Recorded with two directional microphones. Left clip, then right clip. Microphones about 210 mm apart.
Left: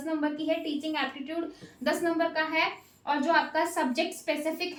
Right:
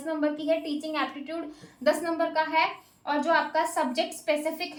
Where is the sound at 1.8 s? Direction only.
15° right (ahead or behind).